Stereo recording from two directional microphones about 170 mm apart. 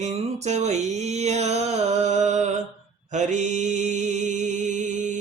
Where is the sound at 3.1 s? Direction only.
45° right (ahead or behind).